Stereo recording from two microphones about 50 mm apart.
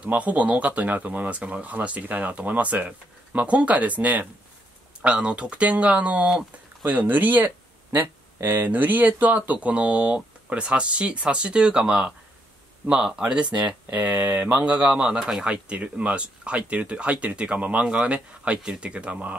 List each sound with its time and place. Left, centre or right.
0.0 s speech: right
5.0 s speech: right
13.9 s speech: right